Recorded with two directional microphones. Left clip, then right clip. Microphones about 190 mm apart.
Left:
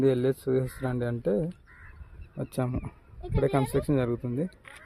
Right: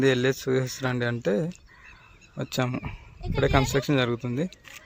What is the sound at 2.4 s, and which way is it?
Speech, centre (ahead or behind).